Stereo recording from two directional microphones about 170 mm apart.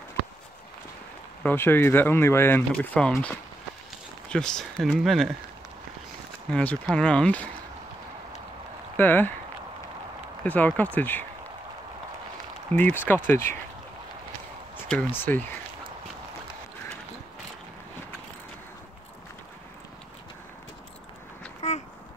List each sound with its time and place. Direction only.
1.4 s speech: 10° left (ahead or behind)
6.5 s speech: 5° left (ahead or behind)
8.9 s speech: 10° left (ahead or behind)
10.4 s speech: 10° left (ahead or behind)
12.7 s speech: 10° left (ahead or behind)
14.9 s speech: 10° left (ahead or behind)
21.5 s a sound: 40° left (ahead or behind)